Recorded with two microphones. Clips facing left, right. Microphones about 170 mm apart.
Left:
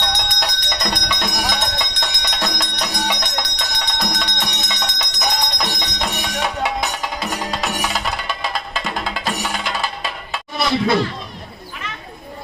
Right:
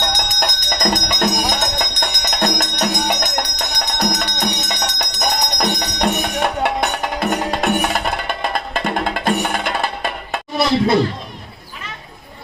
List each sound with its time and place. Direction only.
0.2 s bell: 50° right (ahead or behind)
1.5 s music: 50° right (ahead or behind)